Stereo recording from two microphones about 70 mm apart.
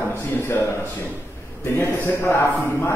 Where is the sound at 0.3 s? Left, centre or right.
Left.